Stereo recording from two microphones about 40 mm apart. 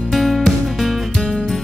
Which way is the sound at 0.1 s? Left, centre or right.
Centre.